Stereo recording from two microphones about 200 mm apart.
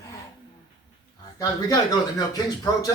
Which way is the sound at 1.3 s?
20° left (ahead or behind).